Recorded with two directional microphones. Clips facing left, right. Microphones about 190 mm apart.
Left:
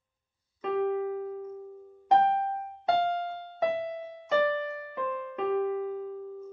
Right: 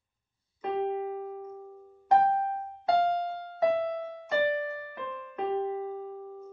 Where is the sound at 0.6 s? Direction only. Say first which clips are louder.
Left 2 dB; 25° right (ahead or behind).